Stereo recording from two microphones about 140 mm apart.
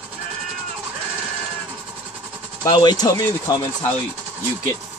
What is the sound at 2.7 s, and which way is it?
Speech, 30° left (ahead or behind).